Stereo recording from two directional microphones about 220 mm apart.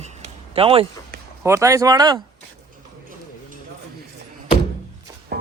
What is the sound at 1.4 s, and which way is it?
Speech, 10° right (ahead or behind).